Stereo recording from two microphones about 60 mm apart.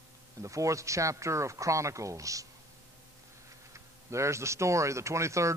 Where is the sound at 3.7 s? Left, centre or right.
Right.